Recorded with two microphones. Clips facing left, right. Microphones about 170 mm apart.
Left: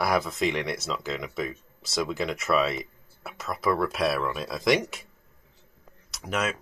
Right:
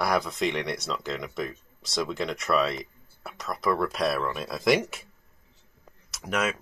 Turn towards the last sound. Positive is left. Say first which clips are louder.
# right 1 dB
turn(degrees=0)  # may be behind; listen again after turning